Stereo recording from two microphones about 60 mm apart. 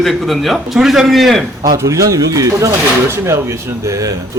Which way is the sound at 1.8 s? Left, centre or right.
Right.